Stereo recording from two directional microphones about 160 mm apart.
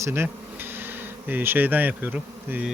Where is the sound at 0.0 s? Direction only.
15° right (ahead or behind).